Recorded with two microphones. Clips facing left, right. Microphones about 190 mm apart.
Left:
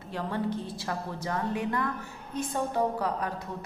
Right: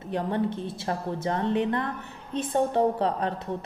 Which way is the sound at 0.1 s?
20° right (ahead or behind).